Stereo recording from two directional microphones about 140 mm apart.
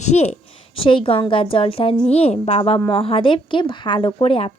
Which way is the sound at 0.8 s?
40° left (ahead or behind).